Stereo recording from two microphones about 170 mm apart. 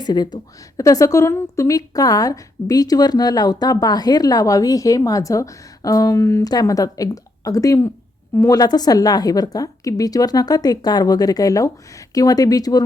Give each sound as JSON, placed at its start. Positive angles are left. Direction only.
{"t": 0.0, "sound": "a woman's voice", "side_deg": 25}